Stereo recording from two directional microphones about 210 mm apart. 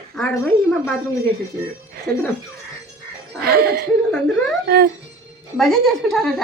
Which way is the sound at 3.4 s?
45° right (ahead or behind).